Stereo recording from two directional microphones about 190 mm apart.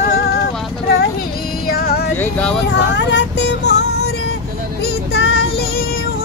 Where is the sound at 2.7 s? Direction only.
65° left (ahead or behind).